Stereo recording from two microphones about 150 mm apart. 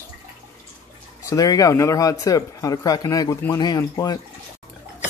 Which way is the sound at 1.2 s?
25° left (ahead or behind).